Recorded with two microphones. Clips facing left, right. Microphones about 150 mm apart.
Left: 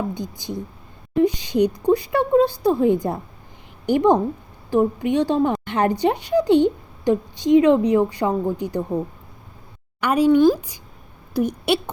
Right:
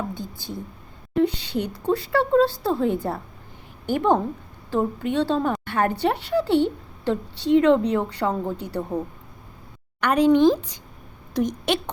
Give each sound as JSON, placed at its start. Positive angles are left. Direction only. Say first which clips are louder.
{"t": 0.1, "sound": "speech", "louder": "left 4 dB", "side_deg": 15}
{"t": 10.0, "sound": "a woman's voice", "louder": "left 1 dB", "side_deg": 10}